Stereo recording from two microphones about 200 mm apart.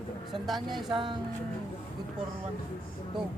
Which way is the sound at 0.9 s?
25° right (ahead or behind).